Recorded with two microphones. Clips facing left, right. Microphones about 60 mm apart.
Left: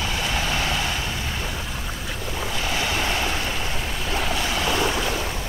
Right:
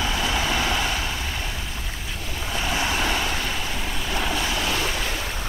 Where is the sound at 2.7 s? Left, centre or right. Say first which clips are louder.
Right 1 dB; centre.